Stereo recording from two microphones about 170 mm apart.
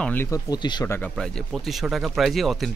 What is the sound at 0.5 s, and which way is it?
Speech, 25° left (ahead or behind).